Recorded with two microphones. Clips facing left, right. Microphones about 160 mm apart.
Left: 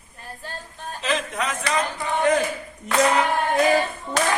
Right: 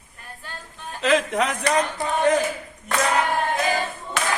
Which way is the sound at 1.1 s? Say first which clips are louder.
Right 5 dB; 65° right (ahead or behind).